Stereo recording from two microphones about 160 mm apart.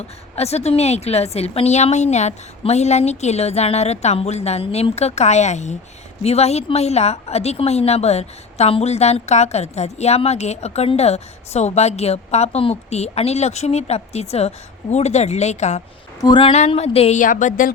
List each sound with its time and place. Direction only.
0.3 s a woman's voice: 40° left (ahead or behind)
16.2 s a woman's voice: 30° left (ahead or behind)
16.5 s a woman's voice: 40° left (ahead or behind); by 17.7 s 55° left (ahead or behind)